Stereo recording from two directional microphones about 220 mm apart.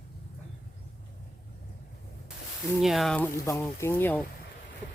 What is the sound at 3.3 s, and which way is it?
Speech, 15° left (ahead or behind).